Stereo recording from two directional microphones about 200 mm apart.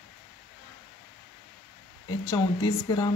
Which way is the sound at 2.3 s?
20° left (ahead or behind).